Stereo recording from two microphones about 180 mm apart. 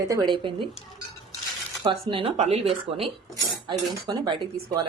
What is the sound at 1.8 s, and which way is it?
Speech, 30° right (ahead or behind).